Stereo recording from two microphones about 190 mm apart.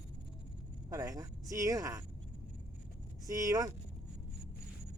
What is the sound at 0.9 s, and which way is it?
Vehicle, 20° right (ahead or behind).